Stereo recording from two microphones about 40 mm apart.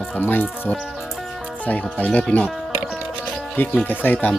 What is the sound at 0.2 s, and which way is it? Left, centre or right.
Music, left.